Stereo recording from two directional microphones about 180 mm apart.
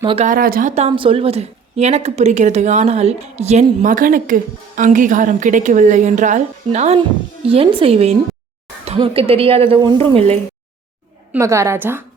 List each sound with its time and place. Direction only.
0.0 s speech: 30° right (ahead or behind)
0.3 s a woman's voice: 55° right (ahead or behind)
0.8 s a woman's voice: 30° right (ahead or behind)
11.3 s a woman's voice: 15° right (ahead or behind)